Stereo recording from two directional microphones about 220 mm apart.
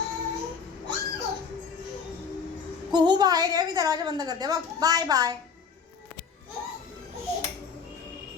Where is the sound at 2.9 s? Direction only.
20° right (ahead or behind).